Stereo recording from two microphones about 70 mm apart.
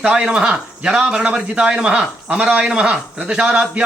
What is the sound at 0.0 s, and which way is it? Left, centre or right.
A man's voice, centre.